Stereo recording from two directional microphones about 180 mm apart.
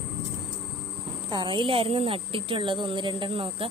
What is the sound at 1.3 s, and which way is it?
Speech, 25° right (ahead or behind).